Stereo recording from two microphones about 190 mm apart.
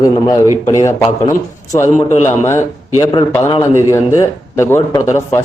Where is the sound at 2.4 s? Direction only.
15° left (ahead or behind).